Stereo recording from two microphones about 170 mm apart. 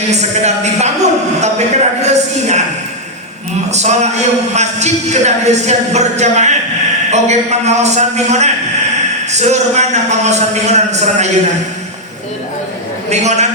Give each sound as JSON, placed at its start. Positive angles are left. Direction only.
{"t": 0.1, "sound": "a sound", "side_deg": -40}
{"t": 3.7, "sound": "a man's voice", "side_deg": -40}
{"t": 13.1, "sound": "a man's voice", "side_deg": -40}